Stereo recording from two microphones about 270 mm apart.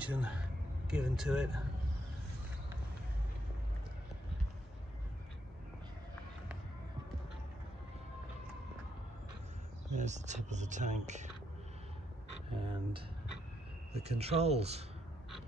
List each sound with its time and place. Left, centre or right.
0.0 s speech: centre
9.9 s speech: right
12.5 s speech: centre